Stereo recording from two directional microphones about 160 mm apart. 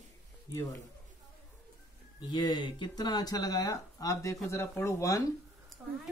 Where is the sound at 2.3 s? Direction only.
25° left (ahead or behind).